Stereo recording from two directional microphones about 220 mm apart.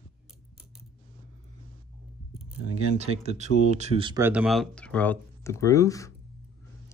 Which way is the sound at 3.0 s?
30° right (ahead or behind).